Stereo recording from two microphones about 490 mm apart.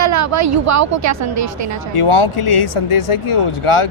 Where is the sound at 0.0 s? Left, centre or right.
Right.